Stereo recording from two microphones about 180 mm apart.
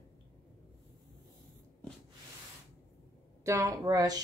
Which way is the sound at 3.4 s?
15° right (ahead or behind).